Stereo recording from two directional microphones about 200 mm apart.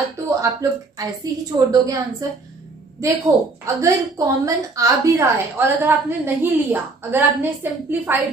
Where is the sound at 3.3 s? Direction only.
15° right (ahead or behind).